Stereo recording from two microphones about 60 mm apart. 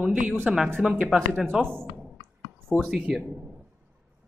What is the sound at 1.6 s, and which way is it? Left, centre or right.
Speech, right.